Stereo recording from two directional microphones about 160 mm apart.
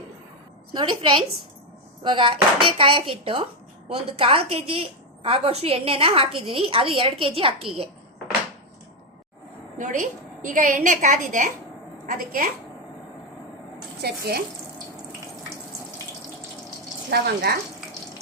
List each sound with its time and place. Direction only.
0.7 s a woman's voice: 30° right (ahead or behind)
9.7 s a woman's voice: 50° right (ahead or behind)
12.1 s a woman's voice: 60° right (ahead or behind)
14.0 s speech: 80° right
17.1 s speech: 85° right